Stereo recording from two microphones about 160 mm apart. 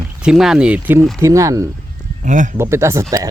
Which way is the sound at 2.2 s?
50° right (ahead or behind).